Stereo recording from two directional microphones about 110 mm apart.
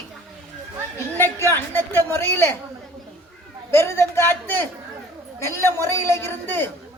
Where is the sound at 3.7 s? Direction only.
25° left (ahead or behind).